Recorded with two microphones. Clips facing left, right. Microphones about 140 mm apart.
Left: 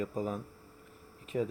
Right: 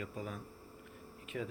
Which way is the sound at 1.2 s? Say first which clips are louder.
Left 8 dB; 35° left (ahead or behind).